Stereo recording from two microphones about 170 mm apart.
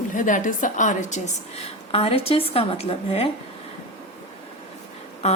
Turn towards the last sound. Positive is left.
turn(degrees=40)  # may be behind; listen again after turning